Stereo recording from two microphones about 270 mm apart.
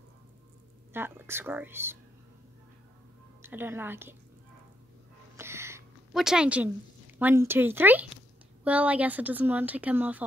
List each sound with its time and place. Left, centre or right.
0.9 s speech: centre
3.4 s speech: centre
5.4 s a sound: centre
7.2 s speech: centre